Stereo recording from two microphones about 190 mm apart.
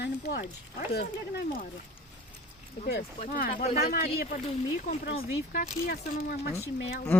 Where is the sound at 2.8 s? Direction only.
50° left (ahead or behind).